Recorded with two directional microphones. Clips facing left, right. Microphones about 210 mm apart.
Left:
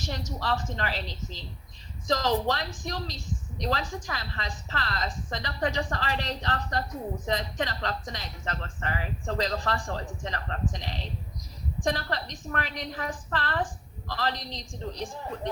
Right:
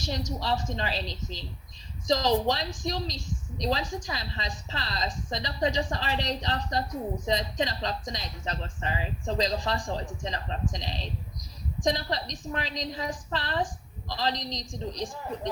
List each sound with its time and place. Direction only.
0.3 s speech: 15° right (ahead or behind)